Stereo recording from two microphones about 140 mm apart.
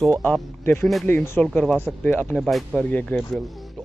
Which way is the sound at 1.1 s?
15° left (ahead or behind).